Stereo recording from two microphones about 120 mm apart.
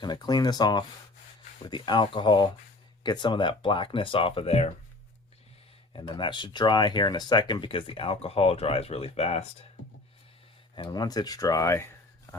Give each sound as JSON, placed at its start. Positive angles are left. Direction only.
{"t": 0.0, "sound": "speech", "side_deg": 35}
{"t": 6.0, "sound": "speech", "side_deg": 40}
{"t": 10.8, "sound": "speech", "side_deg": 35}